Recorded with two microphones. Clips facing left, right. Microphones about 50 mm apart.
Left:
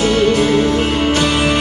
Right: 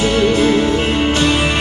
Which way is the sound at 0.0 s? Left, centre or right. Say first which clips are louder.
Even; right.